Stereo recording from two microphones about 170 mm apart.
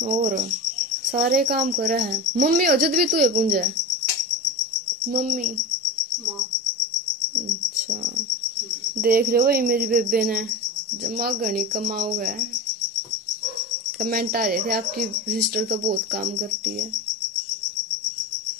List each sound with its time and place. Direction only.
0.0 s cricket: 50° right (ahead or behind)
1.1 s speech: 60° right (ahead or behind)
5.0 s cricket: 55° right (ahead or behind)
9.0 s speech: 60° right (ahead or behind)
11.1 s speech: 60° right (ahead or behind)
14.0 s speech: 60° right (ahead or behind)